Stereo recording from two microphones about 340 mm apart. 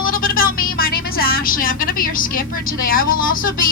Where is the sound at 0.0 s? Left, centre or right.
Left.